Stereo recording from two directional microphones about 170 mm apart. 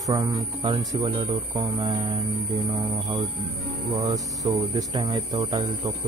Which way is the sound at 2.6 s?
25° right (ahead or behind).